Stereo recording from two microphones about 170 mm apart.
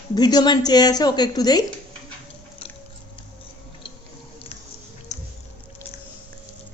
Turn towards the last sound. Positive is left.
turn(degrees=45)  # may be behind; listen again after turning